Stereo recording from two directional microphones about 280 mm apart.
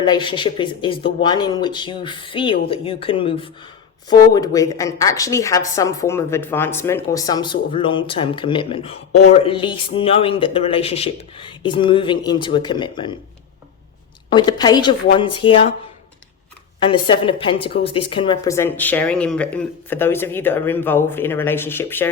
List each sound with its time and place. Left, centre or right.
0.0 s a woman's voice: centre
14.3 s a woman's voice: centre
16.8 s a woman's voice: centre